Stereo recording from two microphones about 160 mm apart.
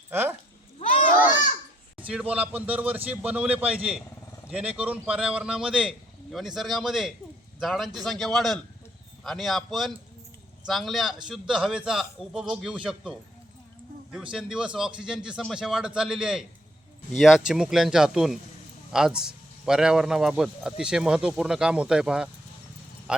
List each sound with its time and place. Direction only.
0.1 s speech: 15° right (ahead or behind)
0.8 s children playing: 55° left (ahead or behind)
2.0 s a man's voice: 10° right (ahead or behind)